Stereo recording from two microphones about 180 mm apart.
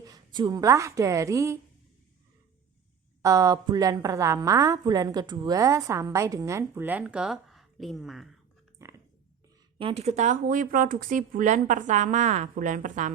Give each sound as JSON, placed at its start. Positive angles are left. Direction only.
{"t": 0.0, "sound": "a woman's voice", "side_deg": -20}
{"t": 3.2, "sound": "a woman's voice", "side_deg": -15}
{"t": 8.8, "sound": "a sound", "side_deg": -15}
{"t": 9.7, "sound": "speech", "side_deg": -35}